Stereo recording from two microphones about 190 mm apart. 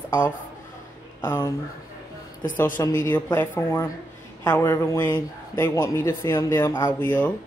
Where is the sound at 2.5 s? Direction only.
10° left (ahead or behind).